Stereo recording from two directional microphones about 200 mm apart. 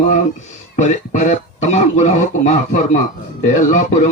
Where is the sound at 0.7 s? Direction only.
35° left (ahead or behind).